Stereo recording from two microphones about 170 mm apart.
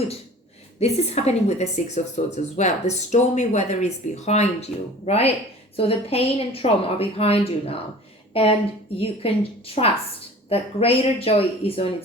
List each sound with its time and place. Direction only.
0.8 s a woman's voice: 40° left (ahead or behind)